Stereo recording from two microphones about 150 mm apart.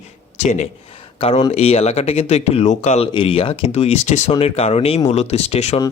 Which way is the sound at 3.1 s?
35° left (ahead or behind).